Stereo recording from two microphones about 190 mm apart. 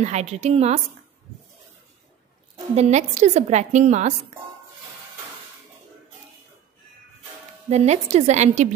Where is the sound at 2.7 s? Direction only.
35° right (ahead or behind).